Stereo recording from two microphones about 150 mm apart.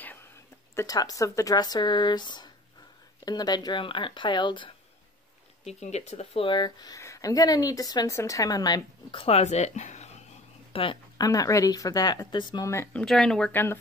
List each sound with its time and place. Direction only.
0.0 s a sound: 15° left (ahead or behind)
0.7 s speech: 25° left (ahead or behind)
5.7 s speech: 45° left (ahead or behind)
10.7 s a sound: 35° left (ahead or behind)
11.2 s speech: 25° left (ahead or behind)
12.6 s speech: 15° left (ahead or behind)
13.0 s speech: 5° left (ahead or behind)